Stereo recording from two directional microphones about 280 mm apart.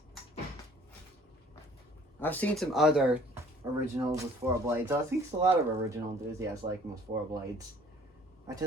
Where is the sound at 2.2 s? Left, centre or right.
Centre.